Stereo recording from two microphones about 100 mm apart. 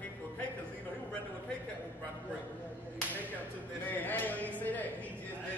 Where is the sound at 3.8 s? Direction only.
15° left (ahead or behind).